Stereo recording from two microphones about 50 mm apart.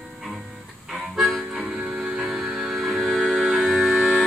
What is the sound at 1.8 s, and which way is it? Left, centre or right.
Music, centre.